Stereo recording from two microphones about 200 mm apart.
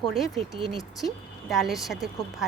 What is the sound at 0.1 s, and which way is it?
Speech, centre (ahead or behind).